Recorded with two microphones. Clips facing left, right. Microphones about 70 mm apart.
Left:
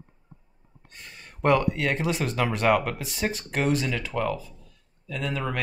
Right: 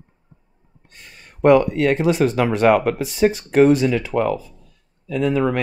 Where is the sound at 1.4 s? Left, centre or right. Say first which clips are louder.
Right 8 dB; centre.